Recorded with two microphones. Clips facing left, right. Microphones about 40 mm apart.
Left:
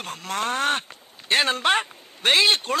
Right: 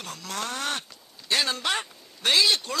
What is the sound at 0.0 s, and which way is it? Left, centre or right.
Speech, left.